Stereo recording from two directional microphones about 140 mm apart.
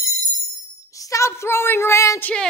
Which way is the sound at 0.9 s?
25° left (ahead or behind).